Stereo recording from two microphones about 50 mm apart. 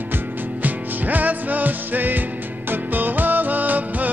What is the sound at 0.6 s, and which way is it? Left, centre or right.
Music, right.